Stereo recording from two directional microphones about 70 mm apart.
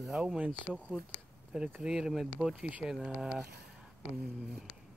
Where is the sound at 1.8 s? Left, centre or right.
Centre.